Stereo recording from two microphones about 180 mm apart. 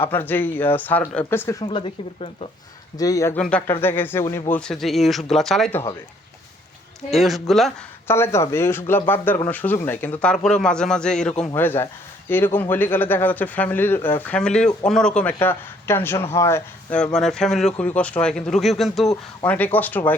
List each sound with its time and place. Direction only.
0.0 s a man's voice: 10° left (ahead or behind)
1.6 s speech: 30° left (ahead or behind)
3.0 s speech: 20° left (ahead or behind)
3.3 s a man's voice: 5° left (ahead or behind)
7.1 s a man's voice: centre (ahead or behind)
8.0 s a man's voice: 15° left (ahead or behind)